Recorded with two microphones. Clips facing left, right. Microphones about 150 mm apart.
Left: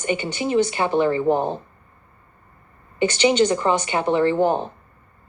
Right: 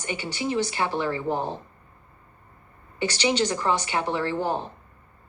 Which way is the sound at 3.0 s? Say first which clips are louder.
Left 7 dB; 20° left (ahead or behind).